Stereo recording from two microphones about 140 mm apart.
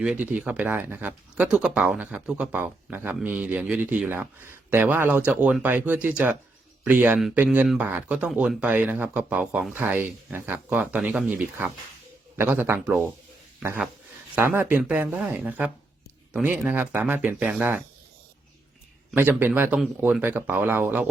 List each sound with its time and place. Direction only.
0.0 s speech: 10° right (ahead or behind)
19.1 s speech: 15° right (ahead or behind)